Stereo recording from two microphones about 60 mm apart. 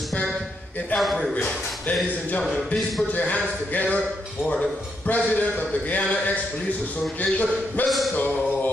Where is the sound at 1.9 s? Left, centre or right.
Left.